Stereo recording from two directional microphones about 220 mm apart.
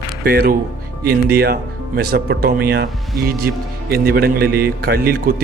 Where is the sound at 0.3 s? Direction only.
45° right (ahead or behind).